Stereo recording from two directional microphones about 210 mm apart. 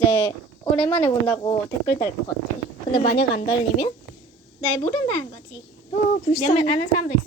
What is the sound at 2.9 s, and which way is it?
Speech, 25° left (ahead or behind).